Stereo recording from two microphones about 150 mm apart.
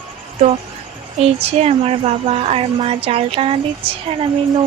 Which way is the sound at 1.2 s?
45° right (ahead or behind).